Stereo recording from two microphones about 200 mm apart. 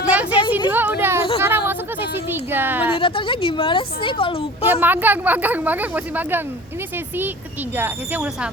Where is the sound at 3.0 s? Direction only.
25° left (ahead or behind).